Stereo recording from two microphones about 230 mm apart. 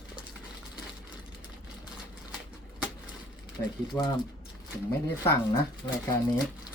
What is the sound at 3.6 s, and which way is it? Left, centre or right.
Speech, left.